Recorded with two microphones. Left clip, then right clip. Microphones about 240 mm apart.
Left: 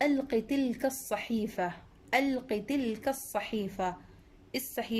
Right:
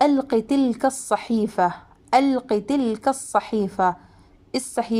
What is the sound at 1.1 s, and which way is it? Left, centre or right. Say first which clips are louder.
Speech: right 11 dB; right.